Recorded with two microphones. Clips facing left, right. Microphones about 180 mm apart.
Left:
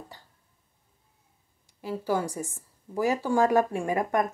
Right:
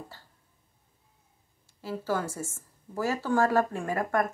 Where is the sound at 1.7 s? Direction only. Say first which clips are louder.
Left 2 dB; 15° left (ahead or behind).